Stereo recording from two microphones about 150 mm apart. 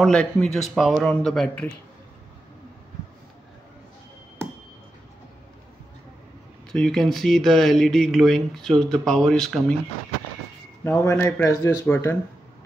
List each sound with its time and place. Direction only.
0.0 s speech: 5° left (ahead or behind)
6.7 s speech: 5° left (ahead or behind)
10.8 s speech: 15° left (ahead or behind)